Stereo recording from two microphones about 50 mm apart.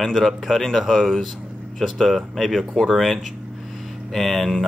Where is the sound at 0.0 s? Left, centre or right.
Centre.